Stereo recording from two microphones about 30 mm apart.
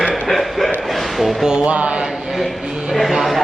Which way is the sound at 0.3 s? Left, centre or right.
Centre.